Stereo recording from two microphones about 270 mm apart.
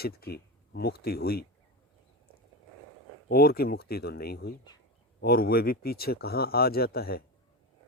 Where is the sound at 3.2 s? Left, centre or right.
Left.